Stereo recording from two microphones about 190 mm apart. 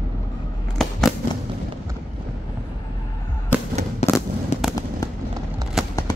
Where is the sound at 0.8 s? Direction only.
Centre (ahead or behind).